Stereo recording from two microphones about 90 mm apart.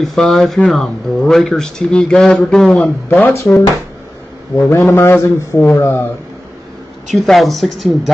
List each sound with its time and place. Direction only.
0.0 s a woman's voice: 5° left (ahead or behind)
3.3 s a man's voice: 30° left (ahead or behind)
7.1 s a woman's voice: centre (ahead or behind)